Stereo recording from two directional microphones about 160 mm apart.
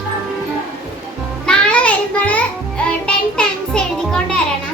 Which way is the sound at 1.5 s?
5° left (ahead or behind).